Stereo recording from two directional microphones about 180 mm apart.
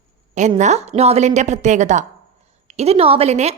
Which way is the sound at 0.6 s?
40° right (ahead or behind).